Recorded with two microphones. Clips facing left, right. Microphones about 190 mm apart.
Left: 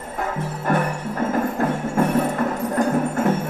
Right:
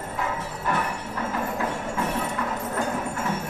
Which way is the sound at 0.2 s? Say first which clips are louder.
Left 5 dB; 50° left (ahead or behind).